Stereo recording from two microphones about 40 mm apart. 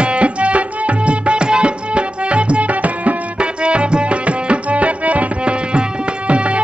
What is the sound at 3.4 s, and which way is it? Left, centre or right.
Music, right.